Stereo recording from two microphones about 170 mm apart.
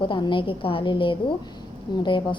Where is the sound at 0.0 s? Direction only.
30° left (ahead or behind).